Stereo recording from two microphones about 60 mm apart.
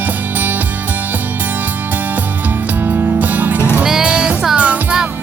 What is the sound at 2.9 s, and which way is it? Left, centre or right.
Music, right.